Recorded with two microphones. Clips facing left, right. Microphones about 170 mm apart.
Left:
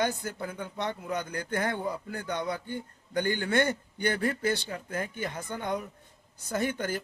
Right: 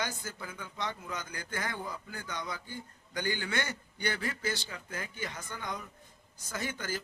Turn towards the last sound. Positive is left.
turn(degrees=55)  # may be behind; listen again after turning